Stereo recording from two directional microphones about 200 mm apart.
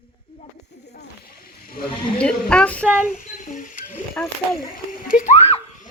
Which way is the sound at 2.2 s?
5° left (ahead or behind).